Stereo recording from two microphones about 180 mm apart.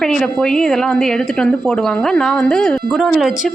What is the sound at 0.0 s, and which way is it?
A woman's voice, 5° left (ahead or behind).